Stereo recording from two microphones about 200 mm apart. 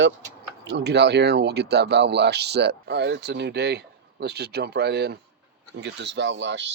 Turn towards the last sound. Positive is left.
turn(degrees=-60)  # may be behind; listen again after turning